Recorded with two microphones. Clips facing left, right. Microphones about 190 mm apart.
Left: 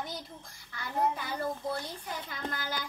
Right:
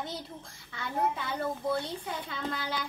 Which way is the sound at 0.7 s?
25° right (ahead or behind).